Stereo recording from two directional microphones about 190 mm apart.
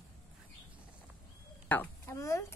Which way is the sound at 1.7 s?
10° left (ahead or behind).